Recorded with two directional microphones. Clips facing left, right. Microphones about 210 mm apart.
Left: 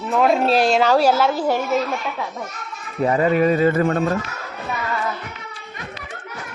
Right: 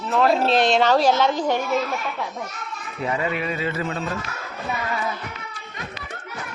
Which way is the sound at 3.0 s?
40° left (ahead or behind).